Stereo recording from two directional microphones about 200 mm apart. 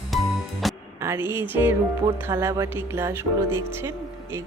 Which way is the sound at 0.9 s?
10° right (ahead or behind).